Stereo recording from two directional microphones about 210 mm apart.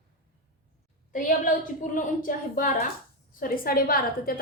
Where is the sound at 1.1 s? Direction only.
40° left (ahead or behind).